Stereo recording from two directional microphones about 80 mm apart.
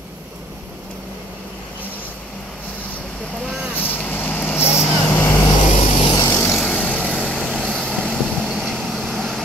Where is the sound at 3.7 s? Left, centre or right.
Left.